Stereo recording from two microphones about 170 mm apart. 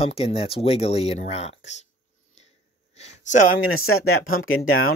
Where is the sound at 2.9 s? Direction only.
40° left (ahead or behind).